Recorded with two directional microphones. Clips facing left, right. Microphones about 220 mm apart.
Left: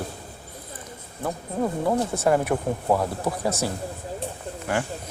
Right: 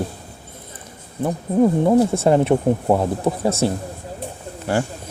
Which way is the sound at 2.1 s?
25° right (ahead or behind).